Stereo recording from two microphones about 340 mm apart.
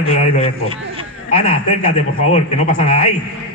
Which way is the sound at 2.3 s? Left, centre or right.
Left.